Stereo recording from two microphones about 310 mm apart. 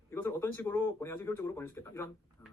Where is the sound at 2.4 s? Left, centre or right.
Centre.